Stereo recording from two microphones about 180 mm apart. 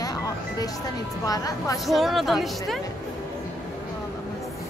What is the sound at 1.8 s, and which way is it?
Speech, centre (ahead or behind).